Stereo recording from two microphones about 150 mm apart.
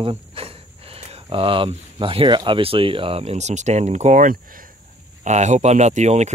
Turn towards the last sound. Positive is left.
turn(degrees=-50)  # may be behind; listen again after turning